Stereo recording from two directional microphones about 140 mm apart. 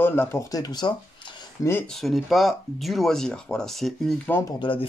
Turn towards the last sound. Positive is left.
turn(degrees=40)  # may be behind; listen again after turning